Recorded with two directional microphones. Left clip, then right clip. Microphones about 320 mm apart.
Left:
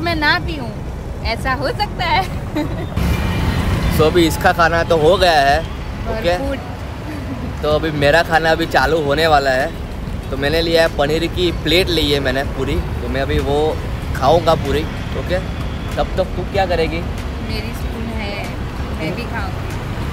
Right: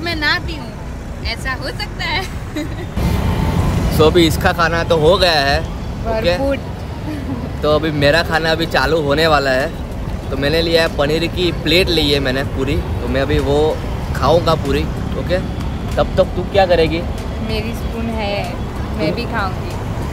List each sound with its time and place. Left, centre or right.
0.0 s speech: centre
4.0 s speech: centre
7.6 s speech: centre
19.0 s speech: centre